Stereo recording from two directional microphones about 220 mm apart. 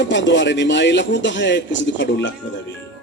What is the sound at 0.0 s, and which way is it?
A man's voice, 55° left (ahead or behind).